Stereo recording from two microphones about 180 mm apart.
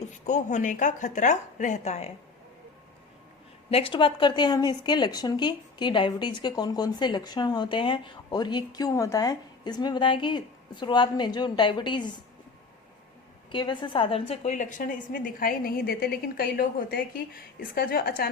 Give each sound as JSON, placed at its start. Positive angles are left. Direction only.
{"t": 0.3, "sound": "a woman's voice", "side_deg": 40}
{"t": 3.7, "sound": "a woman's voice", "side_deg": 30}
{"t": 13.5, "sound": "a woman's voice", "side_deg": 25}